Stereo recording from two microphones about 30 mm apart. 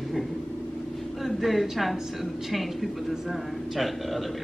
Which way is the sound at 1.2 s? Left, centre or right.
Centre.